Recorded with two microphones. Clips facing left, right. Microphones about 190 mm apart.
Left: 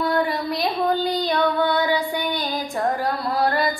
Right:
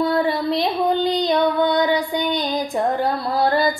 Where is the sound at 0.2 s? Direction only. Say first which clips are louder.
Right 3 dB; 25° right (ahead or behind).